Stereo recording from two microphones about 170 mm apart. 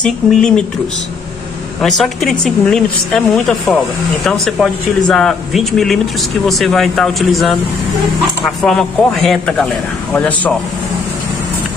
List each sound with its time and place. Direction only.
0.0 s a woman's voice: 5° left (ahead or behind)
1.8 s a woman's voice: centre (ahead or behind)
8.6 s a woman's voice: centre (ahead or behind)